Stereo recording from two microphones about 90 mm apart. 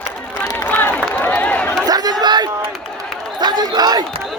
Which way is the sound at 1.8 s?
45° right (ahead or behind).